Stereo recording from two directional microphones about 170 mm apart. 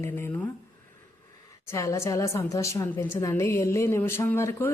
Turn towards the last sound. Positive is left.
turn(degrees=15)  # may be behind; listen again after turning